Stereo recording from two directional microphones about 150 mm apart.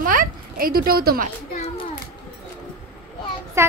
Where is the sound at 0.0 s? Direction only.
65° right (ahead or behind).